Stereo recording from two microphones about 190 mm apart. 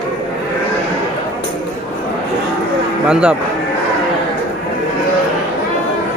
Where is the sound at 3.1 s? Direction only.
5° right (ahead or behind).